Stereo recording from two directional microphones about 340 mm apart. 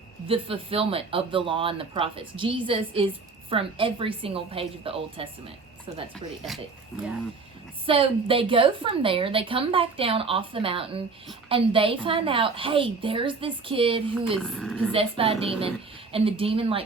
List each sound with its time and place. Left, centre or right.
0.3 s a woman's voice: centre
7.9 s a woman's voice: centre
14.3 s speech: centre
14.9 s a woman's voice: centre